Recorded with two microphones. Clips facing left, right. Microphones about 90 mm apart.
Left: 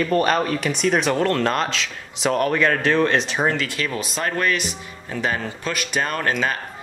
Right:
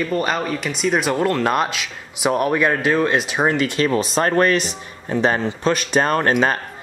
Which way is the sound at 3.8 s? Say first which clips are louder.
Right 7 dB; 35° right (ahead or behind).